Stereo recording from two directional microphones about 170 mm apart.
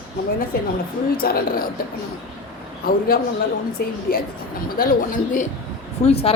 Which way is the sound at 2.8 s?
60° left (ahead or behind).